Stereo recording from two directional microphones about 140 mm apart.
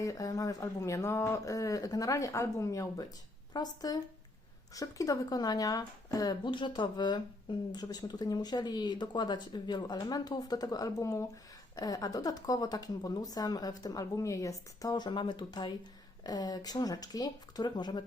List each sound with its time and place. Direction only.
0.0 s speech: 25° left (ahead or behind)